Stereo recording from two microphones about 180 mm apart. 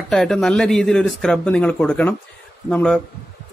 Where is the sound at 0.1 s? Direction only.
Centre (ahead or behind).